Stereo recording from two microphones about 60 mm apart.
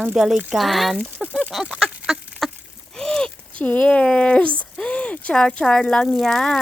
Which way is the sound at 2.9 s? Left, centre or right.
Centre.